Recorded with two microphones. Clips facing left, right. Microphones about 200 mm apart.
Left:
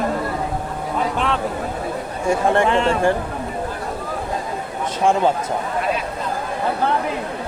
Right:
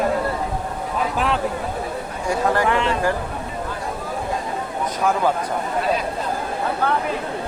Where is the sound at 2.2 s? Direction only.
25° left (ahead or behind).